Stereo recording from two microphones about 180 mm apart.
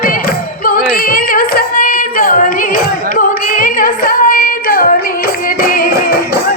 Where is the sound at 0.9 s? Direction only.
55° left (ahead or behind).